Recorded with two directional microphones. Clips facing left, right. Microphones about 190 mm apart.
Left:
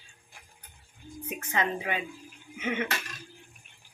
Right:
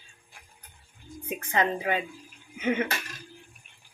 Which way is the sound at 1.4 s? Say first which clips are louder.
Right 3 dB; 35° right (ahead or behind).